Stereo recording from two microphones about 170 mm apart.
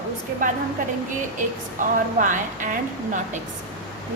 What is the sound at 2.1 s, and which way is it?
Speech, 50° right (ahead or behind).